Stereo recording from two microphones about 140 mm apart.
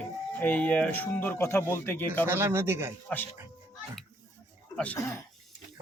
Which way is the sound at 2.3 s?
15° right (ahead or behind).